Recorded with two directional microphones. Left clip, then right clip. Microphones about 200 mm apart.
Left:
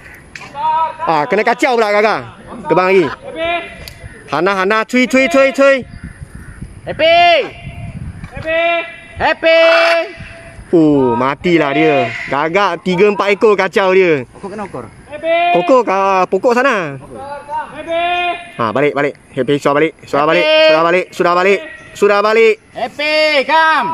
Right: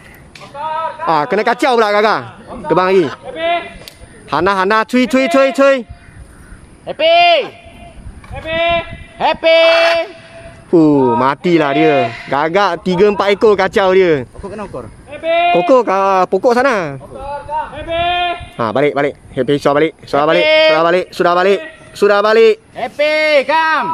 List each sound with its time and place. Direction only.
1.0 s speech: 5° left (ahead or behind)
3.1 s a sound: 50° left (ahead or behind)
4.3 s speech: centre (ahead or behind)
6.9 s a man's voice: 45° left (ahead or behind)
10.7 s speech: 5° right (ahead or behind)
14.5 s speech: 50° left (ahead or behind)
15.5 s speech: centre (ahead or behind)
17.6 s a sound: 50° left (ahead or behind)
18.6 s speech: centre (ahead or behind)
22.8 s a man's voice: 50° left (ahead or behind)